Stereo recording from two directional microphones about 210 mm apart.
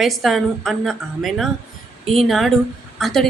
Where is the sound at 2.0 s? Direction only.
25° right (ahead or behind).